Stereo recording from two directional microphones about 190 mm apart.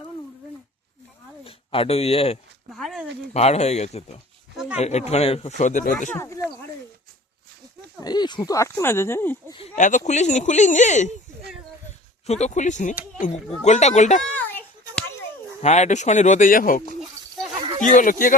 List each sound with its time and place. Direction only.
1.5 s speech: 30° left (ahead or behind)
2.7 s a sound: centre (ahead or behind)
3.3 s speech: 35° left (ahead or behind)
6.1 s speech: 15° left (ahead or behind)
8.0 s speech: 20° left (ahead or behind)
9.5 s speech: 30° left (ahead or behind)
12.2 s speech: 35° left (ahead or behind)
14.3 s children playing: 5° left (ahead or behind)
15.6 s speech: 35° left (ahead or behind)